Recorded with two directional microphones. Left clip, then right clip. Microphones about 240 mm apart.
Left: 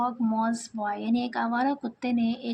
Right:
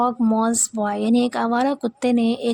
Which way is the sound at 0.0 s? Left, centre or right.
Right.